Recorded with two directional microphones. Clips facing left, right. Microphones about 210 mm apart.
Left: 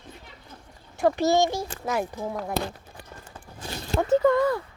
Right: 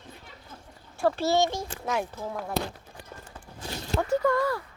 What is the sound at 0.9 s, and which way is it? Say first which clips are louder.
Speech: left 3 dB; 15° left (ahead or behind).